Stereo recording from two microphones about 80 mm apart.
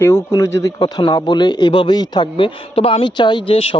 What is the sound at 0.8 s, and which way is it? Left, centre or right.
A man's voice, left.